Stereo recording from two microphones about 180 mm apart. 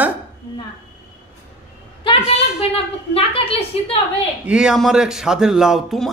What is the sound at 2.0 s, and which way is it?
A woman's voice, 35° left (ahead or behind).